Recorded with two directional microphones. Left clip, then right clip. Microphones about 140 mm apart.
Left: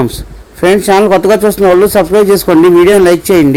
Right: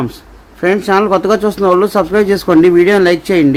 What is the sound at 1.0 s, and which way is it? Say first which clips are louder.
Speech: left 5 dB; 20° left (ahead or behind).